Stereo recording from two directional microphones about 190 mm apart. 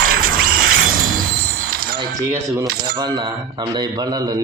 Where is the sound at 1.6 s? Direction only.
50° right (ahead or behind).